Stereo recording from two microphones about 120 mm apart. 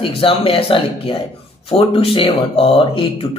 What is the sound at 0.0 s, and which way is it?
Speech, 50° left (ahead or behind).